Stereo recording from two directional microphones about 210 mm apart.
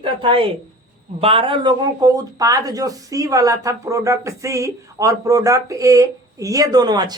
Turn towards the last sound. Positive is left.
turn(degrees=-20)  # may be behind; listen again after turning